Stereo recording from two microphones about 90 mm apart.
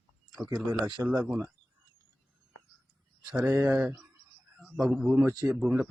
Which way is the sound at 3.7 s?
10° right (ahead or behind).